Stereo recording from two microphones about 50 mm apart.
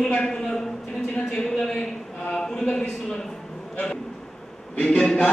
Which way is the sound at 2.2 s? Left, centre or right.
Centre.